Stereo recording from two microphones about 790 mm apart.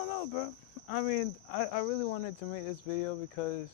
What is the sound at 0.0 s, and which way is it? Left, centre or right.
Speech, left.